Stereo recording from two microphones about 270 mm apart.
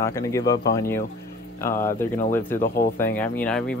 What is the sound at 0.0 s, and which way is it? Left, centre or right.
Speech, centre.